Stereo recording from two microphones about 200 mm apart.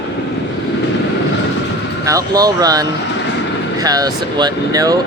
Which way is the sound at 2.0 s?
20° right (ahead or behind).